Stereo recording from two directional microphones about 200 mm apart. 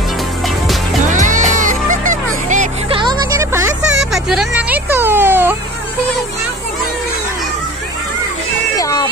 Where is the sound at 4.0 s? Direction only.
Centre (ahead or behind).